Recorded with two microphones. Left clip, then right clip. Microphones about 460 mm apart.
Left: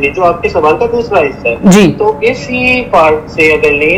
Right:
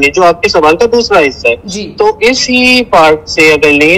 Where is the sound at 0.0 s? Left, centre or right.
Right.